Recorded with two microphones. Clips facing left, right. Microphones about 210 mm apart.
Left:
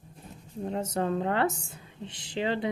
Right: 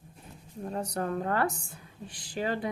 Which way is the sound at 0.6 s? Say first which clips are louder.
Left 3 dB; 25° left (ahead or behind).